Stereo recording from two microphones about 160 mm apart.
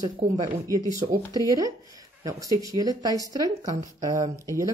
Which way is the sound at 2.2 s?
20° right (ahead or behind).